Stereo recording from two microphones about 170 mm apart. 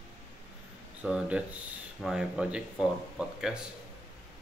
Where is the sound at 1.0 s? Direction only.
5° right (ahead or behind).